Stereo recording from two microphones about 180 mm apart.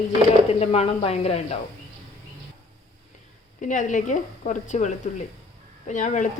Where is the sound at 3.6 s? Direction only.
45° left (ahead or behind).